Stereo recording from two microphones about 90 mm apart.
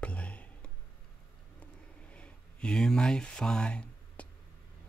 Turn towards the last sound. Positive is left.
turn(degrees=10)  # may be behind; listen again after turning